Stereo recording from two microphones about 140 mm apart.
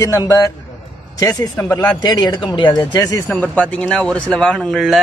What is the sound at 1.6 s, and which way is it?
Speech, 10° left (ahead or behind).